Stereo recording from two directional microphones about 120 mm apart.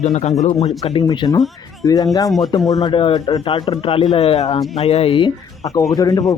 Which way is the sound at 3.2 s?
30° left (ahead or behind).